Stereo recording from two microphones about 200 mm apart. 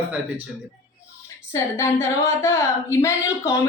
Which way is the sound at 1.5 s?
15° left (ahead or behind).